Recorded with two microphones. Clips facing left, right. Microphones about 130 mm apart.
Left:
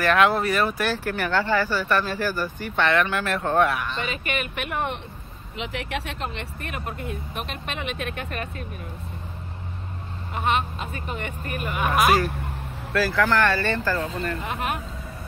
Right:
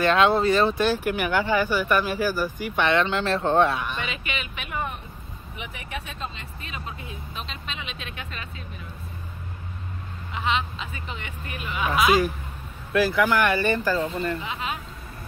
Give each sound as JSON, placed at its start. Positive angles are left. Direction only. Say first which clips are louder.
{"t": 0.0, "sound": "speech", "louder": "right 1 dB", "side_deg": -25}
{"t": 4.0, "sound": "speech", "louder": "left 4 dB", "side_deg": 50}
{"t": 5.6, "sound": "speech", "louder": "left 6 dB", "side_deg": 90}
{"t": 10.3, "sound": "speech", "louder": "left 2 dB", "side_deg": 50}
{"t": 12.9, "sound": "speech", "louder": "right 1 dB", "side_deg": -15}
{"t": 14.4, "sound": "speech", "louder": "left 3 dB", "side_deg": 60}